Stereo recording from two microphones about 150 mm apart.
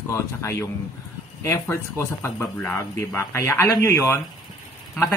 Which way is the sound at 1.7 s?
15° left (ahead or behind).